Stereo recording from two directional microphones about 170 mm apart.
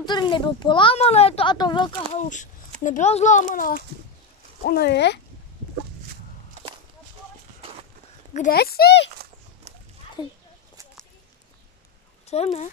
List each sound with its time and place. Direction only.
0.0 s speech: 25° left (ahead or behind)
2.1 s a child's voice: 45° left (ahead or behind)
4.6 s speech: 70° left (ahead or behind); by 5.2 s 85° left
8.3 s speech: 45° left (ahead or behind)
8.5 s speech: 65° left (ahead or behind)
9.7 s dog: 40° right (ahead or behind)
10.2 s speech: 25° left (ahead or behind)
12.3 s speech: 40° left (ahead or behind)